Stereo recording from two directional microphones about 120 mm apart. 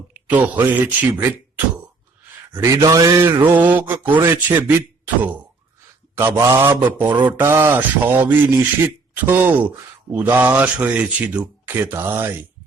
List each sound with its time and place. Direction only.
0.1 s speech: 15° right (ahead or behind)
2.7 s a man's voice: 30° right (ahead or behind)
3.4 s a man's voice: 15° right (ahead or behind)